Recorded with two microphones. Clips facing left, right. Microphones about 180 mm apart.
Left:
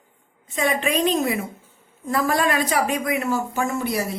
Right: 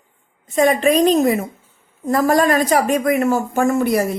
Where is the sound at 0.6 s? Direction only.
40° right (ahead or behind).